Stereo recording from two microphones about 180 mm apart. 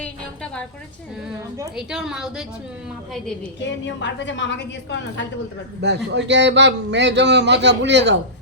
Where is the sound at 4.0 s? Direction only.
90° left.